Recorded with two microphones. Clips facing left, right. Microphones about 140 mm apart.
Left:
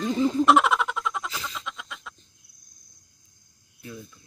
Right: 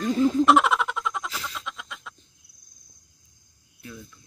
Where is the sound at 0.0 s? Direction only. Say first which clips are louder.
Right 1 dB; centre (ahead or behind).